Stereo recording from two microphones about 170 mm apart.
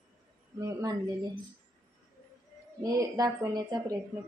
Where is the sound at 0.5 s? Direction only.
20° right (ahead or behind).